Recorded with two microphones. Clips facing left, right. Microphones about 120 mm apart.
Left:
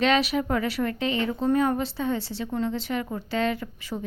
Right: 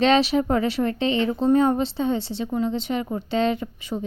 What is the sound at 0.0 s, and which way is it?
Speech, 30° right (ahead or behind).